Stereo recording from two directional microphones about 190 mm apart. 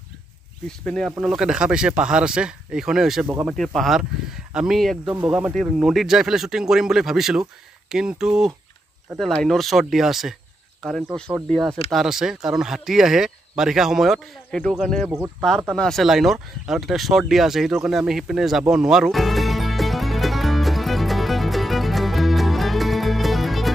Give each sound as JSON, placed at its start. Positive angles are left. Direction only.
{"t": 0.7, "sound": "speech", "side_deg": 5}
{"t": 15.0, "sound": "speech", "side_deg": -10}
{"t": 15.7, "sound": "a sound", "side_deg": 0}